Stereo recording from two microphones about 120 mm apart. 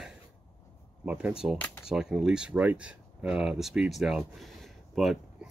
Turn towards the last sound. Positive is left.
turn(degrees=0)  # may be behind; listen again after turning